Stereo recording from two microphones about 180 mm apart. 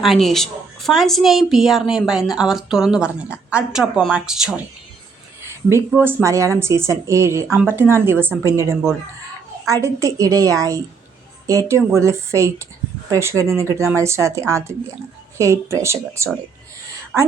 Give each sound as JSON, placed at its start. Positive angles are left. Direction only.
{"t": 0.0, "sound": "a woman's voice", "side_deg": 0}
{"t": 5.9, "sound": "speech", "side_deg": -10}
{"t": 7.4, "sound": "a woman's voice", "side_deg": 0}
{"t": 7.7, "sound": "a woman's voice", "side_deg": -15}